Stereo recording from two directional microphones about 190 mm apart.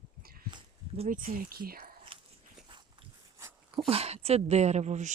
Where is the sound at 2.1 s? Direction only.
25° right (ahead or behind).